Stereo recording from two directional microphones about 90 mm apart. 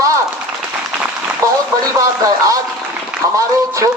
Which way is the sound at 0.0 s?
35° right (ahead or behind).